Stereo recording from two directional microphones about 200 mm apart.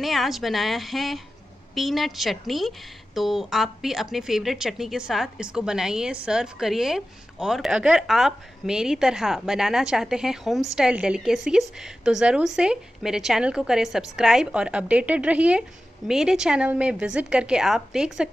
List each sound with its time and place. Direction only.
0.0 s speech: centre (ahead or behind)